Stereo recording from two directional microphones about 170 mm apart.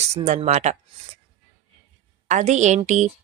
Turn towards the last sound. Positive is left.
turn(degrees=-45)  # may be behind; listen again after turning